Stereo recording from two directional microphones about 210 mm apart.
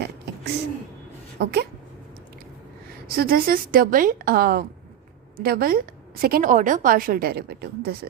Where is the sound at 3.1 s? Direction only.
45° right (ahead or behind).